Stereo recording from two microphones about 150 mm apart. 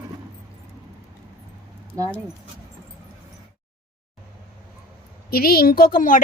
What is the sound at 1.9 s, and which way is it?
Speech, 25° right (ahead or behind).